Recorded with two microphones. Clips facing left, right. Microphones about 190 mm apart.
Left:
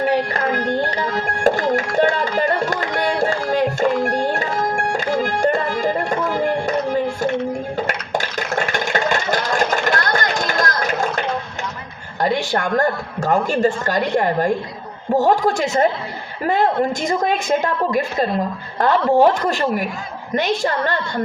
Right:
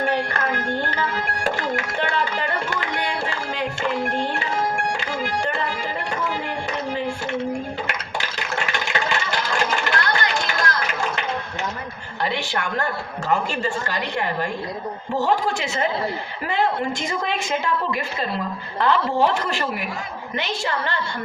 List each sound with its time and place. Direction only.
0.1 s speech: 35° left (ahead or behind)
0.9 s music: 35° left (ahead or behind)
7.9 s a sound: 50° left (ahead or behind)
12.2 s a woman's voice: 50° left (ahead or behind)
17.1 s a woman's voice: 50° left (ahead or behind)